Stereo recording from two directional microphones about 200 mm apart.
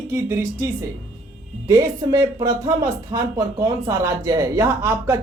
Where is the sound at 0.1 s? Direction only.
15° right (ahead or behind).